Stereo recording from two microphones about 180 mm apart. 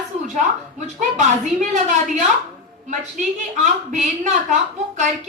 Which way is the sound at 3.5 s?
45° right (ahead or behind).